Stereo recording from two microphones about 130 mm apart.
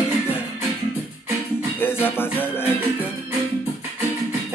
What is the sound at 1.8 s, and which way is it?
Music, 15° left (ahead or behind).